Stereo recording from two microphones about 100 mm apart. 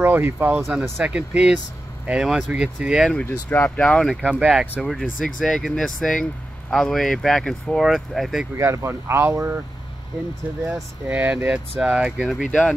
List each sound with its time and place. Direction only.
0.0 s speech: 20° right (ahead or behind)
0.6 s speech: centre (ahead or behind)
1.0 s speech: 10° right (ahead or behind)
3.4 s speech: 15° left (ahead or behind)
4.4 s speech: 10° right (ahead or behind)
4.8 s speech: centre (ahead or behind)
8.5 s speech: 30° right (ahead or behind)
10.7 s speech: 15° right (ahead or behind)
12.4 s speech: 10° left (ahead or behind)